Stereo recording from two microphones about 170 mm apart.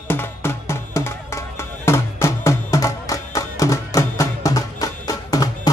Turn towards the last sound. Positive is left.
turn(degrees=20)  # may be behind; listen again after turning